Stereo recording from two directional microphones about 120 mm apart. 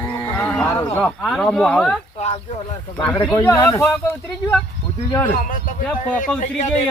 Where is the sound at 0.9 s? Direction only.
5° left (ahead or behind).